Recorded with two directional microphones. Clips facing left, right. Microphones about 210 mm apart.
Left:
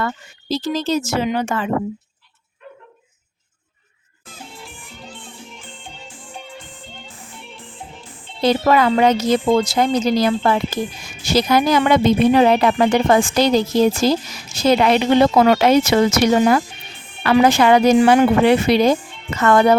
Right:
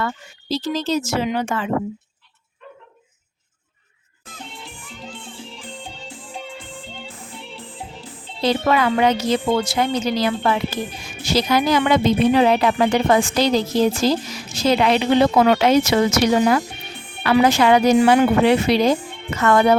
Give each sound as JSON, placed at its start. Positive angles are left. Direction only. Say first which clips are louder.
{"t": 0.0, "sound": "a woman's voice", "louder": "left 2 dB", "side_deg": 50}
{"t": 5.3, "sound": "music", "louder": "right 3 dB", "side_deg": -35}
{"t": 7.5, "sound": "music", "louder": "right 2 dB", "side_deg": -35}
{"t": 8.4, "sound": "a woman's voice", "louder": "left 3 dB", "side_deg": 45}
{"t": 14.5, "sound": "a woman's voice", "louder": "left 2 dB", "side_deg": 50}